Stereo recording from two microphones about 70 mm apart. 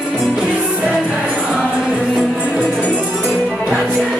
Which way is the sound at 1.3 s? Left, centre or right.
Centre.